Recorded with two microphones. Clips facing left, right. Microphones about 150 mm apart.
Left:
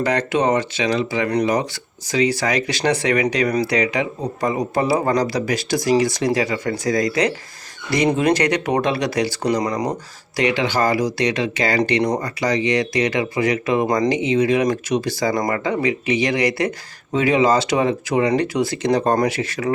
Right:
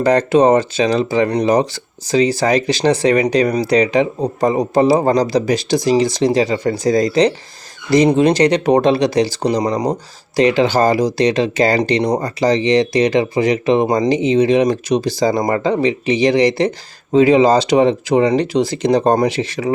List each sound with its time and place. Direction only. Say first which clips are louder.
0.0 s speech: right 7 dB; 35° right (ahead or behind)